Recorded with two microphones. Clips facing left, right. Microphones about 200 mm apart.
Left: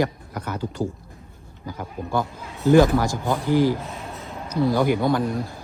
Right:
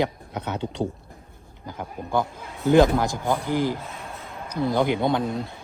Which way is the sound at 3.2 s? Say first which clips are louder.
Left 4 dB; 15° right (ahead or behind).